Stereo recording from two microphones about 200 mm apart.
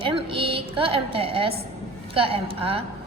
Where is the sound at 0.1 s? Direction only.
25° right (ahead or behind).